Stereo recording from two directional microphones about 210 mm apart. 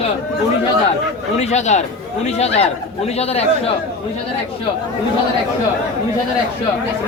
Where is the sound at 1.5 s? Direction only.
35° left (ahead or behind).